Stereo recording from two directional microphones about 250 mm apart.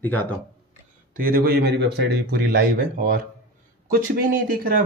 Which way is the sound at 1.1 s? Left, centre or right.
Right.